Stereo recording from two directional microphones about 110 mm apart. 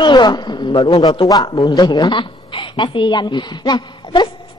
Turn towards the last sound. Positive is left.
turn(degrees=40)  # may be behind; listen again after turning